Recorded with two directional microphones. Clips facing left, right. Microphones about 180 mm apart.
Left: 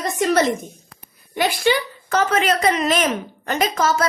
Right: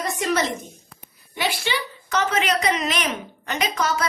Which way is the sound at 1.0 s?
45° left (ahead or behind).